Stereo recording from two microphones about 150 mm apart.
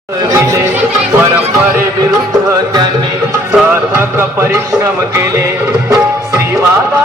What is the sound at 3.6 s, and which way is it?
Music, 15° right (ahead or behind).